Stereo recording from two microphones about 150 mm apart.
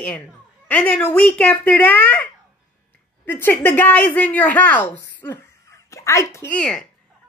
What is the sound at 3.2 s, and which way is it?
Speech, 15° left (ahead or behind).